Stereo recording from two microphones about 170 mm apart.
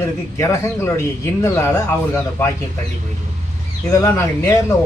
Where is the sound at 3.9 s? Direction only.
20° left (ahead or behind).